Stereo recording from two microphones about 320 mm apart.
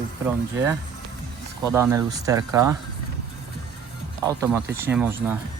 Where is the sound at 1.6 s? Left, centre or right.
Centre.